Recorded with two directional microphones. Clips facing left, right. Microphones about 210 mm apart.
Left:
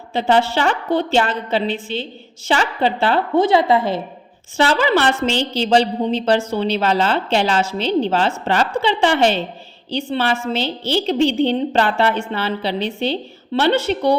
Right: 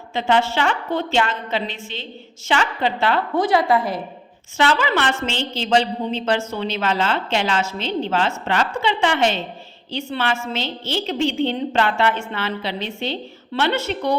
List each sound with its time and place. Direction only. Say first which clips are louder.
0.1 s a woman's voice: left 3 dB; 35° left (ahead or behind)